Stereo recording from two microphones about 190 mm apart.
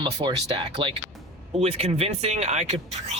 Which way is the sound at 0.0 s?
25° right (ahead or behind).